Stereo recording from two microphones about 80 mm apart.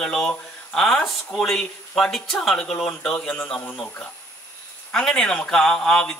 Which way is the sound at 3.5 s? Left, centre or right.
Centre.